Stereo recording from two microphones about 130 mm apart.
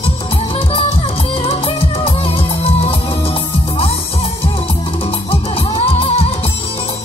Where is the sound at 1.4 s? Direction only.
45° left (ahead or behind).